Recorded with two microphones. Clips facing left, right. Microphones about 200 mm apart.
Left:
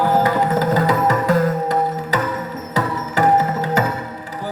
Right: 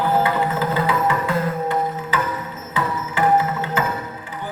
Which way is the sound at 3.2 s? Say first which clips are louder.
Left 3 dB; 40° left (ahead or behind).